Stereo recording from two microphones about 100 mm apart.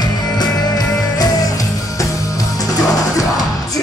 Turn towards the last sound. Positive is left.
turn(degrees=35)  # may be behind; listen again after turning